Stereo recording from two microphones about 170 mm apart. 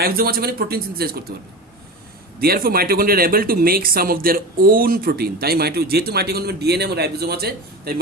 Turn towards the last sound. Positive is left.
turn(degrees=-65)  # may be behind; listen again after turning